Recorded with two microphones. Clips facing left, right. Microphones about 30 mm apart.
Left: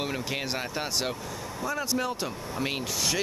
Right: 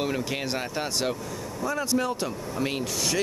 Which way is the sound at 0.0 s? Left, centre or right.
Centre.